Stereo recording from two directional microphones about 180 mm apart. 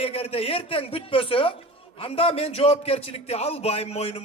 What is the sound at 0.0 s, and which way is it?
Speech, 30° left (ahead or behind).